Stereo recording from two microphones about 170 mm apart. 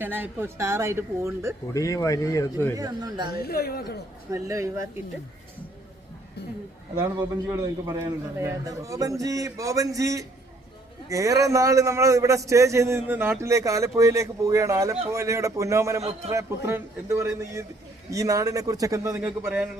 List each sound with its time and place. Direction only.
0.0 s a man's voice: 10° right (ahead or behind)
1.7 s speech: 20° left (ahead or behind)
2.7 s a man's voice: 20° right (ahead or behind)
3.4 s a woman's voice: 65° left (ahead or behind)
4.3 s a man's voice: 20° right (ahead or behind)
7.0 s a man's voice: 15° right (ahead or behind)
16.0 s a man's voice: 40° right (ahead or behind)
16.6 s a man's voice: 15° right (ahead or behind)